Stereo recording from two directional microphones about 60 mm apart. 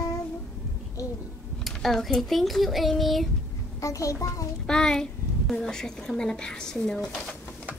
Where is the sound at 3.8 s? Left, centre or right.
Left.